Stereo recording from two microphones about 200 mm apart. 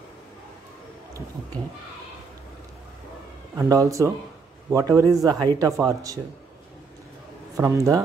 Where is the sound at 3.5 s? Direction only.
15° right (ahead or behind).